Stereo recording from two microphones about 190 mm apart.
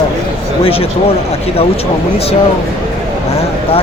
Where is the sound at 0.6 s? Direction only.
30° left (ahead or behind).